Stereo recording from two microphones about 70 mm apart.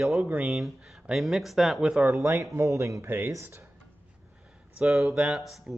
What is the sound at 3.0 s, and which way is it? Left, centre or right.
Speech, right.